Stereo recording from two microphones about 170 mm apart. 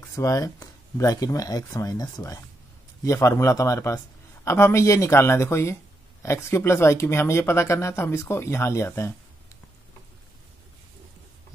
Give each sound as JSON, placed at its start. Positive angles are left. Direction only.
{"t": 0.1, "sound": "speech", "side_deg": 20}